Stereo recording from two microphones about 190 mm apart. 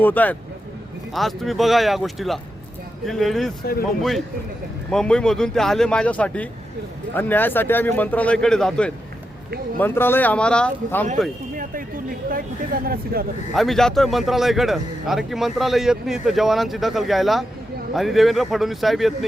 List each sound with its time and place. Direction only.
0.0 s a man's voice: 10° left (ahead or behind)
4.9 s a man's voice: 5° left (ahead or behind)
11.5 s speech: 50° right (ahead or behind)
13.5 s a man's voice: centre (ahead or behind)